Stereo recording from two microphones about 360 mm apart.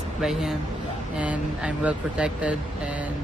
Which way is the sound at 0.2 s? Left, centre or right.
Centre.